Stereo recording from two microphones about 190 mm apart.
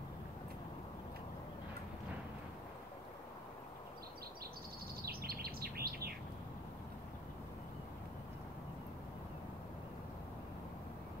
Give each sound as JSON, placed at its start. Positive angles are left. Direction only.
{"t": 5.0, "sound": "bird", "side_deg": -55}